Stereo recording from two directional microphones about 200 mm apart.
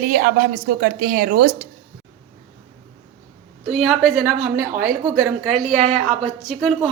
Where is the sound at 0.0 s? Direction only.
45° right (ahead or behind).